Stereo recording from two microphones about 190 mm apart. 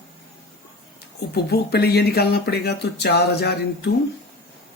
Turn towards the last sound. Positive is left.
turn(degrees=60)  # may be behind; listen again after turning